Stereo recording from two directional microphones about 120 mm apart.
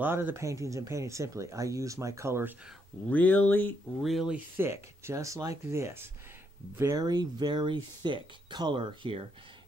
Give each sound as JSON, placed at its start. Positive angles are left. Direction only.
{"t": 0.0, "sound": "speech", "side_deg": -15}
{"t": 3.1, "sound": "speech", "side_deg": 15}
{"t": 4.0, "sound": "speech", "side_deg": 0}
{"t": 4.6, "sound": "speech", "side_deg": -20}